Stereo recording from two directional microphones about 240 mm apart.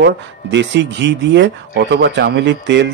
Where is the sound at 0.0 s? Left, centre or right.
Right.